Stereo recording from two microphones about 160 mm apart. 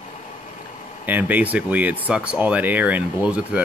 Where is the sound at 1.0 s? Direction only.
10° right (ahead or behind).